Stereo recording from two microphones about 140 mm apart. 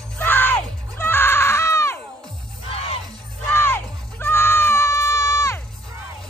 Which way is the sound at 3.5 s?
15° left (ahead or behind).